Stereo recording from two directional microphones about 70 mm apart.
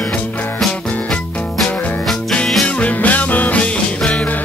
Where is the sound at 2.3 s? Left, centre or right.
Centre.